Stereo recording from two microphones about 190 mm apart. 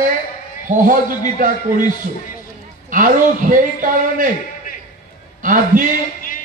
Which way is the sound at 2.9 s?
45° right (ahead or behind).